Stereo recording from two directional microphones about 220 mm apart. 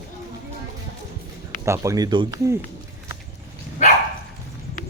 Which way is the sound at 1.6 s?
15° right (ahead or behind).